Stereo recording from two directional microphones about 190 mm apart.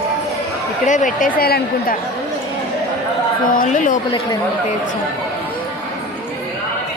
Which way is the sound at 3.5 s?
40° left (ahead or behind).